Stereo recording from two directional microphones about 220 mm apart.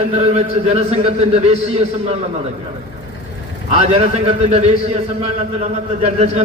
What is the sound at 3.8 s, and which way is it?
A man's voice, 25° right (ahead or behind).